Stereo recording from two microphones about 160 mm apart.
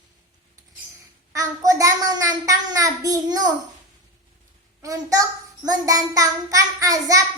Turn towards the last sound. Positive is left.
turn(degrees=-20)  # may be behind; listen again after turning